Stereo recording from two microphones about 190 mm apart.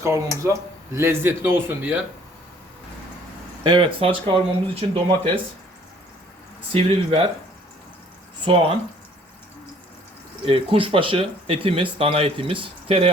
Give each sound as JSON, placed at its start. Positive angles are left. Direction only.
{"t": 0.0, "sound": "a man's voice", "side_deg": -15}
{"t": 3.6, "sound": "speech", "side_deg": -25}
{"t": 6.7, "sound": "speech", "side_deg": -30}
{"t": 8.5, "sound": "speech", "side_deg": -30}
{"t": 10.4, "sound": "speech", "side_deg": -30}